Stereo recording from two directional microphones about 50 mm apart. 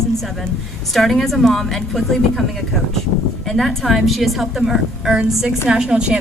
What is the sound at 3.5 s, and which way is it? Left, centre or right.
A woman's voice, centre.